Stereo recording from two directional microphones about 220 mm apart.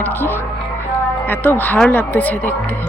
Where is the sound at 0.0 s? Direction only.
10° left (ahead or behind).